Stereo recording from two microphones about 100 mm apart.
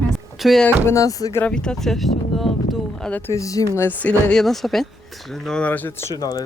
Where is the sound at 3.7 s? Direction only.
20° left (ahead or behind).